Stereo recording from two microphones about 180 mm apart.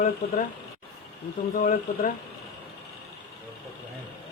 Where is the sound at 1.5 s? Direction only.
45° left (ahead or behind).